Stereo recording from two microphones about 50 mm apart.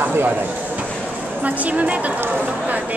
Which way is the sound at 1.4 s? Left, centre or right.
Right.